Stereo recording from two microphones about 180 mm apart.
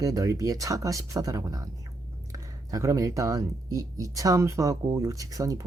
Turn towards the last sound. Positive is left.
turn(degrees=-20)  # may be behind; listen again after turning